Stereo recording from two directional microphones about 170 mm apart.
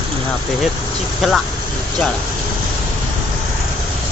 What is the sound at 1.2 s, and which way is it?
Speech, centre (ahead or behind).